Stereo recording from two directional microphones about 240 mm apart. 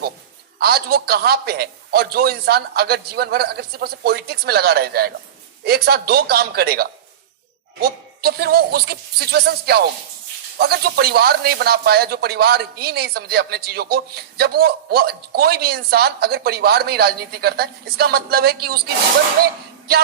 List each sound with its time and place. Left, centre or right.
0.6 s speech: right